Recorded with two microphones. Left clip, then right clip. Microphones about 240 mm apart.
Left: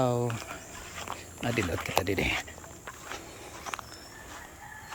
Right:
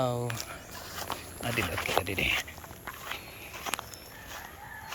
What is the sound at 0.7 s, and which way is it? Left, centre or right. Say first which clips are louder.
Walk: right 4 dB; right.